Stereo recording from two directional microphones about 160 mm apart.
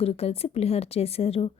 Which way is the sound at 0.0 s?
40° left (ahead or behind).